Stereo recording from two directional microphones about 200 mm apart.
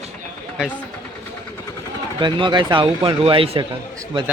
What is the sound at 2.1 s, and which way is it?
Speech, 20° right (ahead or behind).